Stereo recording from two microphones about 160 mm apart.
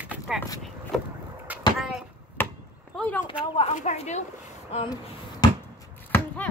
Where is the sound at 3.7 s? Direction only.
45° left (ahead or behind).